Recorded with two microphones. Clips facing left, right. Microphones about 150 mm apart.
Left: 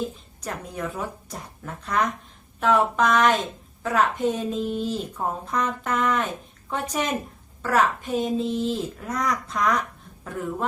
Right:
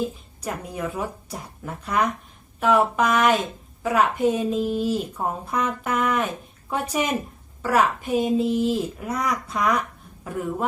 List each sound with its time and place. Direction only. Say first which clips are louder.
0.4 s speech: right 2 dB; 10° right (ahead or behind)